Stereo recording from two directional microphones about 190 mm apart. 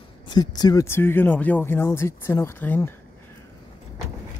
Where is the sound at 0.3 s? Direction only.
20° left (ahead or behind).